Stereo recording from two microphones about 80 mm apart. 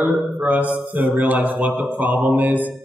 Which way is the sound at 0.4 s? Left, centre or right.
Centre.